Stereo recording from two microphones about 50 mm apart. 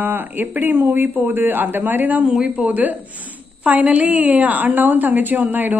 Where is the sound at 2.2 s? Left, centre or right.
Centre.